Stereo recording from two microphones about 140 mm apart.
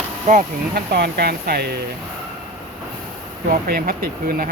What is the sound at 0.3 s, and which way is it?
Speech, 60° right (ahead or behind).